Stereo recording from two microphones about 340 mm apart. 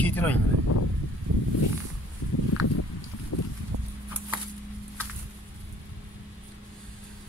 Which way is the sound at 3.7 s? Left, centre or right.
Right.